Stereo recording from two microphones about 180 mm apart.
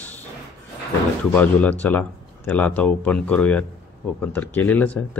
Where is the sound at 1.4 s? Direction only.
10° left (ahead or behind).